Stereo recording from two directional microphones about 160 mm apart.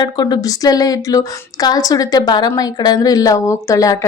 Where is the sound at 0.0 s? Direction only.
25° left (ahead or behind).